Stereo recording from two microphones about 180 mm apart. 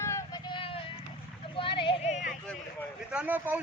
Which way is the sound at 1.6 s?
30° left (ahead or behind).